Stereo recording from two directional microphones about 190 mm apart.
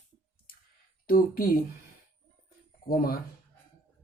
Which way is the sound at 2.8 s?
50° left (ahead or behind).